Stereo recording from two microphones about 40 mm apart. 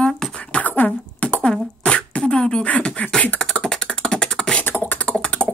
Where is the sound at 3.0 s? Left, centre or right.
Left.